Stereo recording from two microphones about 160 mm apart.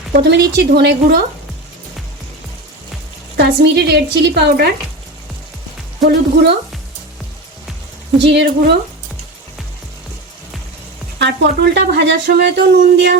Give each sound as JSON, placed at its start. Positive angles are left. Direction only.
{"t": 0.1, "sound": "speech", "side_deg": -90}
{"t": 3.3, "sound": "speech", "side_deg": -85}
{"t": 6.1, "sound": "speech", "side_deg": -90}
{"t": 8.3, "sound": "speech", "side_deg": -90}
{"t": 11.2, "sound": "speech", "side_deg": -90}